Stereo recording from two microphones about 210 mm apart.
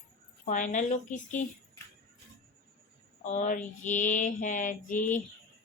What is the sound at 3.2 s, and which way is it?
Mantra, 35° left (ahead or behind).